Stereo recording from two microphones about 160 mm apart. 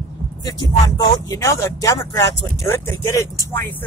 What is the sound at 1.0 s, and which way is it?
Speech, 20° left (ahead or behind).